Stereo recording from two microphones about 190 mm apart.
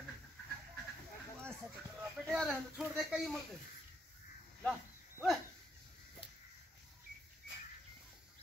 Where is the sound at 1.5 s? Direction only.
15° right (ahead or behind).